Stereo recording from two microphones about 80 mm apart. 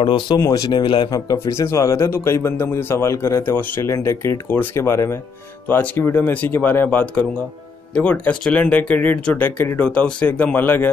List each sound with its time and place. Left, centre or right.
0.0 s speech: left
0.5 s speech: left
1.1 s speech: left